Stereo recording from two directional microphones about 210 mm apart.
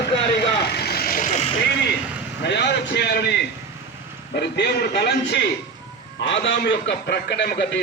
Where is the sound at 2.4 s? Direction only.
55° left (ahead or behind).